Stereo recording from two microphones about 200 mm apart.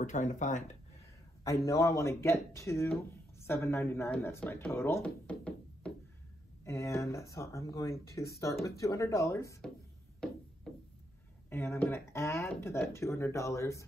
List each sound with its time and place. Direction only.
0.0 s speech: 40° left (ahead or behind)
1.7 s speech: 15° left (ahead or behind)
11.5 s speech: 10° left (ahead or behind)